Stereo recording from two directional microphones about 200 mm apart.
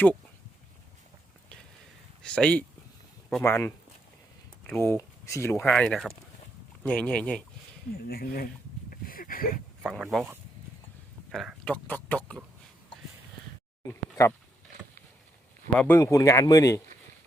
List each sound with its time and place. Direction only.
2.2 s speech: 5° left (ahead or behind)
7.9 s speech: 50° left (ahead or behind)
8.9 s a sound: 45° left (ahead or behind)
9.8 s speech: centre (ahead or behind)
15.8 s speech: 10° left (ahead or behind)